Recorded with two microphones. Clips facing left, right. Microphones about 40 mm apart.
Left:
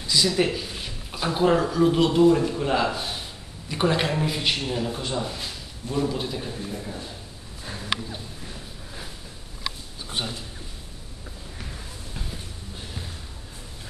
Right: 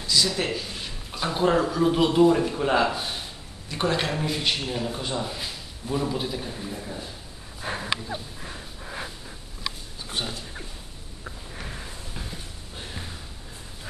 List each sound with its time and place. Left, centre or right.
0.0 s a man's voice: centre
3.6 s a man's voice: centre
7.6 s dog: right
8.4 s a sound: right
10.0 s speech: centre
11.5 s sniff: centre